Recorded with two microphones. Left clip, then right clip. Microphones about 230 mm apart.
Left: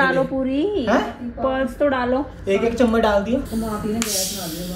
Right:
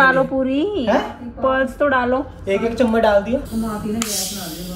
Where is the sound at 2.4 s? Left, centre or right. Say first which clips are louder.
Even; centre.